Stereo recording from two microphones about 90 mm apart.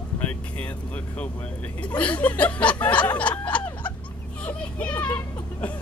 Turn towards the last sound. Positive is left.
turn(degrees=20)  # may be behind; listen again after turning